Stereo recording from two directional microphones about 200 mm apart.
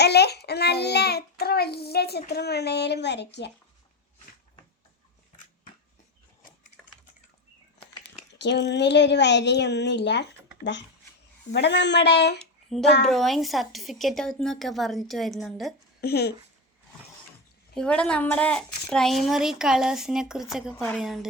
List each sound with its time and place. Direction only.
0.0 s a child's voice: 55° left (ahead or behind)
8.4 s a child's voice: 60° left (ahead or behind)
12.4 s a sound: centre (ahead or behind)
13.1 s a woman's voice: centre (ahead or behind)
16.0 s speech: 50° left (ahead or behind)
17.7 s a woman's voice: 5° left (ahead or behind)